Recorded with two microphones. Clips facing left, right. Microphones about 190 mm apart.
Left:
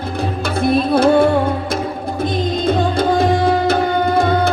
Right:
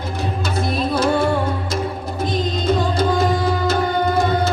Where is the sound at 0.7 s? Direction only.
55° left (ahead or behind).